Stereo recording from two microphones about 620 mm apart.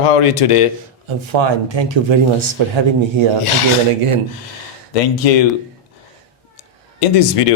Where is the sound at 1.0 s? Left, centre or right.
Right.